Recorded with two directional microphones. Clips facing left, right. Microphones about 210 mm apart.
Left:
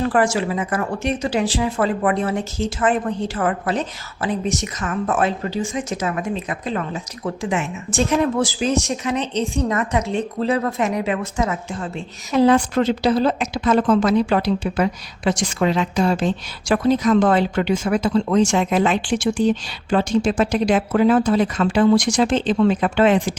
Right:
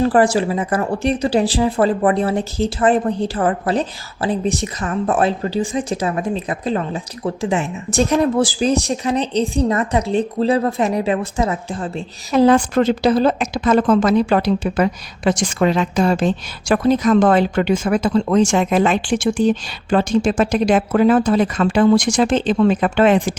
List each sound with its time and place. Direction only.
0.0 s speech: 35° right (ahead or behind); by 23.3 s 50° right (ahead or behind)